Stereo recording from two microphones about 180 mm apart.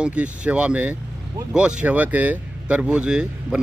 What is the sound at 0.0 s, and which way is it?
Speech, 5° right (ahead or behind).